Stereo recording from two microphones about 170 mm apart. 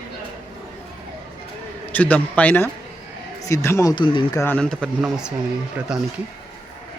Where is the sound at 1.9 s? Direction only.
10° left (ahead or behind); by 4.4 s 25° left (ahead or behind).